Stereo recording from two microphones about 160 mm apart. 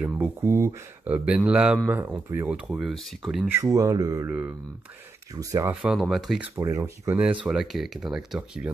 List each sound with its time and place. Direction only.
0.0 s speech: 10° right (ahead or behind)
3.4 s speech: 20° right (ahead or behind)
4.3 s speech: 10° right (ahead or behind)
5.8 s speech: 5° right (ahead or behind)
6.6 s speech: 20° right (ahead or behind)